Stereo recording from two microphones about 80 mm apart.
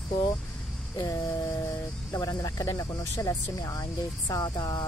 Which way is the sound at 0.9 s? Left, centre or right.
Left.